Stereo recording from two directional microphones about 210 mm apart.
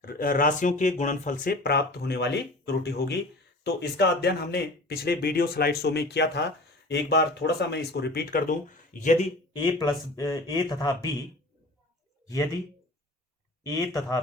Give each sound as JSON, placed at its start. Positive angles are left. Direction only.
{"t": 0.0, "sound": "speech", "side_deg": 45}
{"t": 9.5, "sound": "speech", "side_deg": 20}
{"t": 13.7, "sound": "speech", "side_deg": 15}